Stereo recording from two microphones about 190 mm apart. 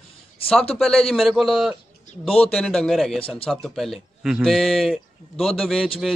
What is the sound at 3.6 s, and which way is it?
A man's voice, centre (ahead or behind).